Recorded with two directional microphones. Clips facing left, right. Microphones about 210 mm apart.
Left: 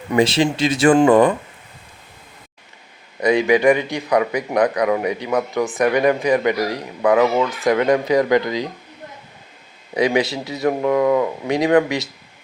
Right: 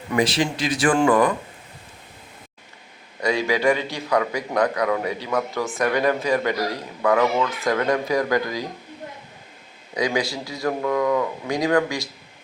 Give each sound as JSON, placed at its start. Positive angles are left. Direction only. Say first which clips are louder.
{"t": 0.1, "sound": "speech", "louder": "left 5 dB", "side_deg": 25}
{"t": 3.2, "sound": "speech", "louder": "left 6 dB", "side_deg": 20}
{"t": 9.9, "sound": "speech", "louder": "left 5 dB", "side_deg": 25}